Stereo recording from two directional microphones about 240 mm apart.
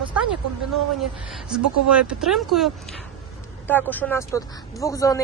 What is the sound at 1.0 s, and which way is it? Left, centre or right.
Speech, centre.